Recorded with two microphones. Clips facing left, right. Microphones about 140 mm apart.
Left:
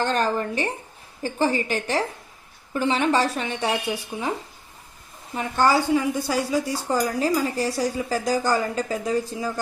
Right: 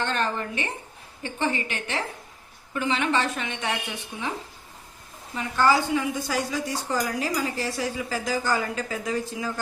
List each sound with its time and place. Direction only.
0.0 s speech: 40° left (ahead or behind)
5.3 s speech: 35° left (ahead or behind)